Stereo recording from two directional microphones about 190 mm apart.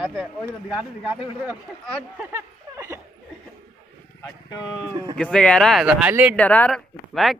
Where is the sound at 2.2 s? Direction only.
15° right (ahead or behind).